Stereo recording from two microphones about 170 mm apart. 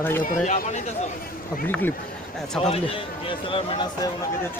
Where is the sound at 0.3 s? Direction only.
45° left (ahead or behind).